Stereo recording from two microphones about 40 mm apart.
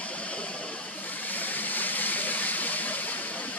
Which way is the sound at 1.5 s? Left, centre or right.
Left.